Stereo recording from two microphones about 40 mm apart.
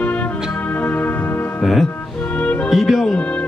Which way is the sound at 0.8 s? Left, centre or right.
Left.